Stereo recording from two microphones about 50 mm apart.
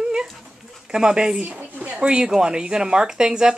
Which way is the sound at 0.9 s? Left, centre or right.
Centre.